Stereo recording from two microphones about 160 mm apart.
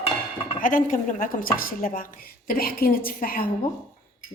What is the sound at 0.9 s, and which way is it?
A woman's voice, 60° left (ahead or behind).